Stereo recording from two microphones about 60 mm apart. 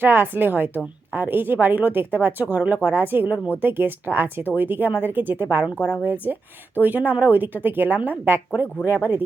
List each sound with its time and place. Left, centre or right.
0.0 s speech: right
5.7 s speech: left
6.7 s speech: right